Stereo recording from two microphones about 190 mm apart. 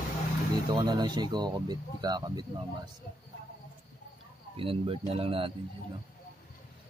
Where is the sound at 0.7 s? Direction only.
25° right (ahead or behind).